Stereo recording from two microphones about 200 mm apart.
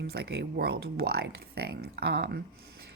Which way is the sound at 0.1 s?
55° right (ahead or behind).